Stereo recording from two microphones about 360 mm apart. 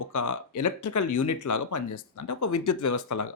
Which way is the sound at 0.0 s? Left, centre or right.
Left.